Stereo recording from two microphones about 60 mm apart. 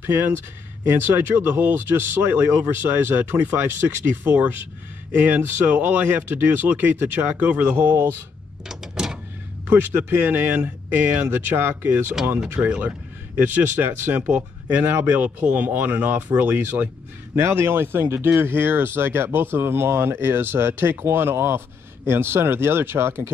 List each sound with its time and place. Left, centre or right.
0.9 s speech: right
7.9 s speech: right
8.6 s a sound: centre
9.7 s speech: right
12.5 s speech: right
13.4 s speech: right